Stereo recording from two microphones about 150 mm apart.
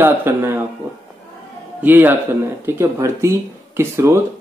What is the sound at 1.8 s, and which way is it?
Speech, 15° right (ahead or behind).